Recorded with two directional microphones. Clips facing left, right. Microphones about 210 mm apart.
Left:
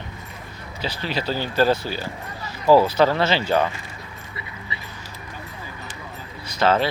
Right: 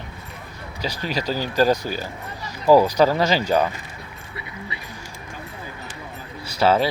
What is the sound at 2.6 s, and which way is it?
Speech, 15° right (ahead or behind).